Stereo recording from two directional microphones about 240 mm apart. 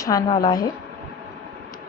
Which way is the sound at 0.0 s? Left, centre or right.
Centre.